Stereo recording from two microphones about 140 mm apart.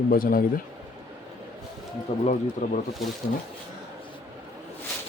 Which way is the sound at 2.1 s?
45° left (ahead or behind).